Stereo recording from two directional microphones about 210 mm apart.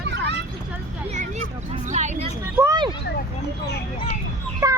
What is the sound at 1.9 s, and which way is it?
Speech, 35° right (ahead or behind).